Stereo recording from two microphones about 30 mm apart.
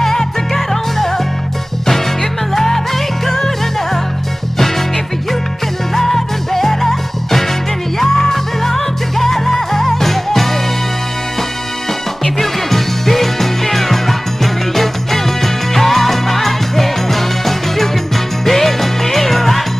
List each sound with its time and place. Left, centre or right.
0.0 s music: centre
2.5 s music: centre
5.9 s music: centre
12.4 s music: centre